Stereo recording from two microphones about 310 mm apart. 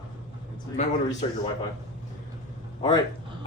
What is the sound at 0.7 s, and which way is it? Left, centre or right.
Speech, left.